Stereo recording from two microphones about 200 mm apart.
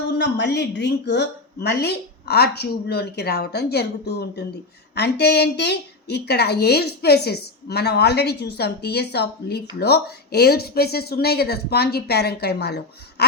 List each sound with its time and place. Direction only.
0.2 s a woman's voice: 60° left (ahead or behind)